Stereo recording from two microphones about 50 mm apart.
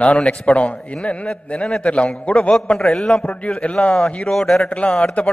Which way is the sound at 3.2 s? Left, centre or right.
Left.